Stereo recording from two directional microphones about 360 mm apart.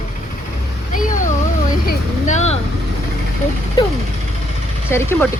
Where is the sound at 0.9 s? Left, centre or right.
Left.